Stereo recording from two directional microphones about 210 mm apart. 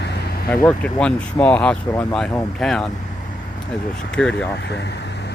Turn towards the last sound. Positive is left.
turn(degrees=55)  # may be behind; listen again after turning